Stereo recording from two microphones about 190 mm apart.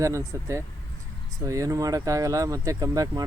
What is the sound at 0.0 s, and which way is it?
Speech, 15° right (ahead or behind).